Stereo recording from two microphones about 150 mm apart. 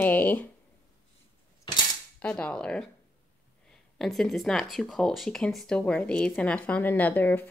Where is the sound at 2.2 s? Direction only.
10° left (ahead or behind).